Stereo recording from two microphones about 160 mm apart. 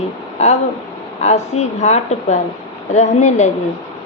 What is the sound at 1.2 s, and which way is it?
A woman's voice, 45° left (ahead or behind).